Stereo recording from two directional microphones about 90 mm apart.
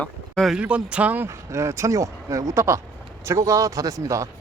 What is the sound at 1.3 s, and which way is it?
Speech, 35° right (ahead or behind).